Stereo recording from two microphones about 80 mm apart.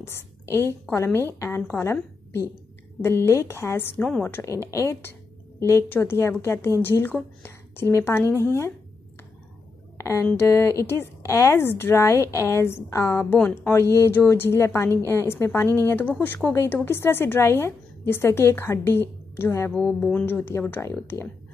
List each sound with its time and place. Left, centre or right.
0.9 s a woman's voice: left
4.0 s speech: centre
4.4 s a woman's voice: left
9.9 s a sound: left
10.3 s a woman's voice: left
13.2 s speech: centre
13.7 s a woman's voice: left
19.8 s a woman's voice: centre